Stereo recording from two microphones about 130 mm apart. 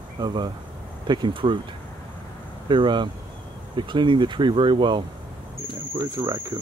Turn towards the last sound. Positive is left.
turn(degrees=-25)  # may be behind; listen again after turning